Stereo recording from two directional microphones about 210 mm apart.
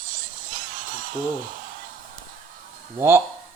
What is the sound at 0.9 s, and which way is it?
Speech, 40° right (ahead or behind).